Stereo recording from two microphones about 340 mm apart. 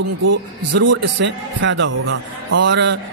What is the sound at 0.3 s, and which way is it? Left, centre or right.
A man's voice, right.